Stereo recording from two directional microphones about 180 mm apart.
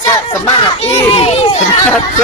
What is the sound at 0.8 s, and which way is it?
Speech, 35° left (ahead or behind).